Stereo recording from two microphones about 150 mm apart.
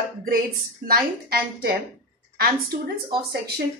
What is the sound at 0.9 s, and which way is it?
A woman's voice, 90° right.